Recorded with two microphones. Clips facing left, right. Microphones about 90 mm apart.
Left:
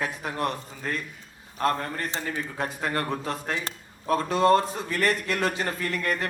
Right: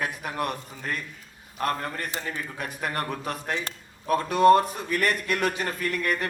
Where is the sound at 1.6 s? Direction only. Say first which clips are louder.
Left 2 dB; 30° left (ahead or behind).